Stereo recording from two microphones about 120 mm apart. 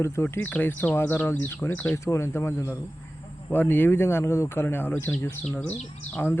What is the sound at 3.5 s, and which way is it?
Speech, 15° left (ahead or behind).